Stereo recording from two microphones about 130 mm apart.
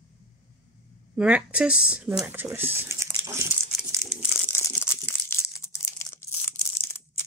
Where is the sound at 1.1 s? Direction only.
5° right (ahead or behind).